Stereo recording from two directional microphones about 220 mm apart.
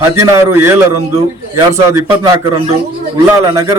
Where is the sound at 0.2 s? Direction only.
10° right (ahead or behind).